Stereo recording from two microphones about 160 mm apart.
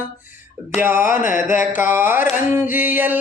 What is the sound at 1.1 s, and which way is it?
Music, 55° left (ahead or behind).